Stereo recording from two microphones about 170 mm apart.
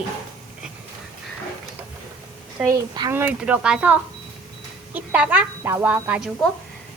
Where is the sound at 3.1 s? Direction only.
10° right (ahead or behind).